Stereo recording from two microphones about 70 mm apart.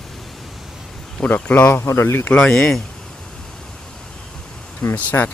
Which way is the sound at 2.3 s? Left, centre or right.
Centre.